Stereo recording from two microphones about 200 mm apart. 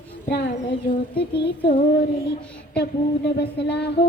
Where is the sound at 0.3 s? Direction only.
55° left (ahead or behind).